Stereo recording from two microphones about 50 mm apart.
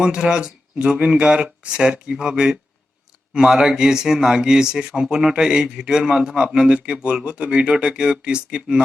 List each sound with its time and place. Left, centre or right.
0.0 s speech: centre